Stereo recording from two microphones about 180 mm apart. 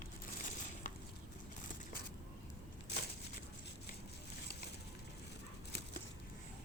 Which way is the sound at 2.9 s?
70° left (ahead or behind).